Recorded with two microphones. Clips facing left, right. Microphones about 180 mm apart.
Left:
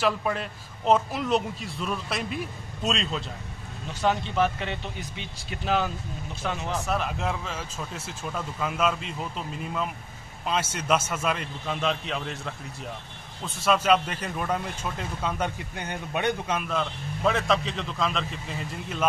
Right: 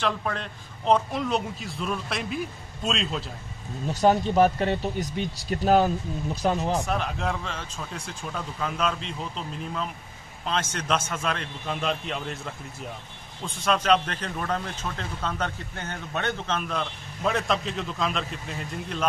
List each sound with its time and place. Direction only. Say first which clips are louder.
0.0 s a man's voice: left 2 dB; 5° left (ahead or behind)
3.9 s speech: right 5 dB; 40° right (ahead or behind)
6.9 s a man's voice: even; centre (ahead or behind)
13.7 s a man's voice: left 1 dB; 5° left (ahead or behind)